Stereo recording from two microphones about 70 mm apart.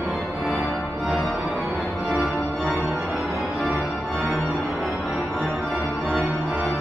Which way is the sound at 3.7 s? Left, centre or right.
Centre.